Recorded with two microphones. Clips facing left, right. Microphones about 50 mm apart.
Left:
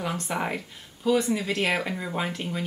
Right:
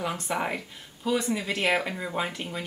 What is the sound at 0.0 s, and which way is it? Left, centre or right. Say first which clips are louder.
Speech: even; centre.